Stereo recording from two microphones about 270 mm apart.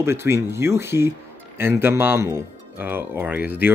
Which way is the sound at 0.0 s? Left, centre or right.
Centre.